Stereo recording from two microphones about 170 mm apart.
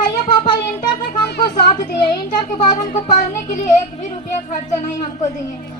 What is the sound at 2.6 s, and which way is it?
Speech, 45° left (ahead or behind).